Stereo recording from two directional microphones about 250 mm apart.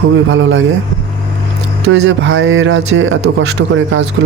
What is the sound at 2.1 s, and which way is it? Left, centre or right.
A man's voice, right.